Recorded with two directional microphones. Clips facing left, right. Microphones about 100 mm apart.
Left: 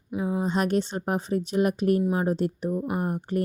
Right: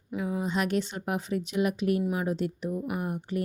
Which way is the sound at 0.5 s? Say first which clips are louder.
Left 4 dB; 40° left (ahead or behind).